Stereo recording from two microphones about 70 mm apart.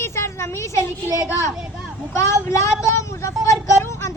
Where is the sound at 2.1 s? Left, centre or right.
Left.